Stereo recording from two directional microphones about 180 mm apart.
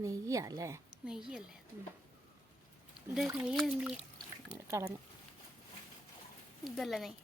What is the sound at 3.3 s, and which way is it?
Speech, 5° right (ahead or behind).